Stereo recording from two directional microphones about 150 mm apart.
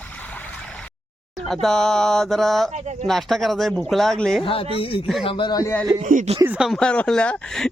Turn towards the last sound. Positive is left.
turn(degrees=5)  # may be behind; listen again after turning